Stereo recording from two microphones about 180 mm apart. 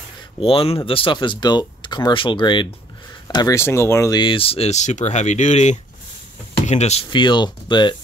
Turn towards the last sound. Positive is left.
turn(degrees=25)  # may be behind; listen again after turning